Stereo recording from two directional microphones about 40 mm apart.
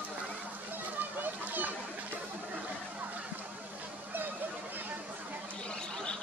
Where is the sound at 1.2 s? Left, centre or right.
Right.